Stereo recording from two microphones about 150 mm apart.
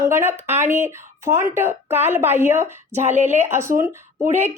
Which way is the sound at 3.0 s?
50° right (ahead or behind).